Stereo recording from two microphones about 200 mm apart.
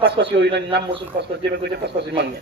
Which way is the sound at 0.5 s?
60° right (ahead or behind).